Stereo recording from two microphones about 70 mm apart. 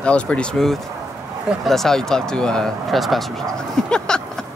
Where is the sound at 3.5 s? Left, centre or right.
Centre.